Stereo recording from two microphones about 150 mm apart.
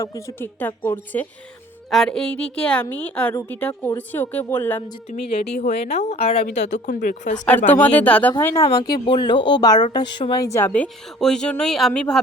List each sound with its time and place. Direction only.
0.0 s a woman's voice: 20° left (ahead or behind)
1.9 s a woman's voice: 5° left (ahead or behind)
5.6 s a woman's voice: 45° left (ahead or behind)
7.7 s a woman's voice: 10° left (ahead or behind)
9.0 s a woman's voice: 30° left (ahead or behind); by 12.2 s 5° left (ahead or behind)